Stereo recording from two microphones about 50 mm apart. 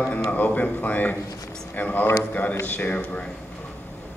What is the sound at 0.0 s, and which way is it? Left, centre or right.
A man's voice, left.